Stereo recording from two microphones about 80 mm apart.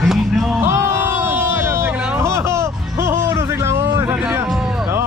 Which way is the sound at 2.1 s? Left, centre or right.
Right.